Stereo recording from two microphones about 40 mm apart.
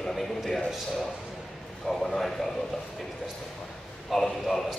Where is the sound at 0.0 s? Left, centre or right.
Centre.